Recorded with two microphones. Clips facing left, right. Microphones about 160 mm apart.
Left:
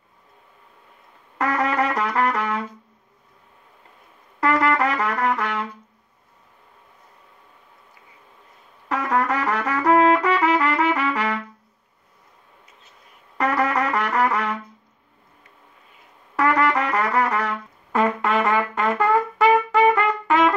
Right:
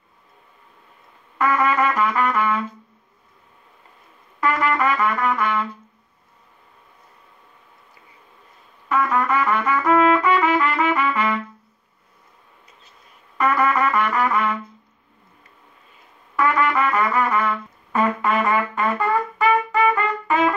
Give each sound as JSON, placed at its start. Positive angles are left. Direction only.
{"t": 1.4, "sound": "trumpet", "side_deg": 75}
{"t": 4.4, "sound": "trumpet", "side_deg": 70}
{"t": 8.8, "sound": "trumpet", "side_deg": 75}
{"t": 13.4, "sound": "trumpet", "side_deg": 75}
{"t": 16.3, "sound": "trumpet", "side_deg": 75}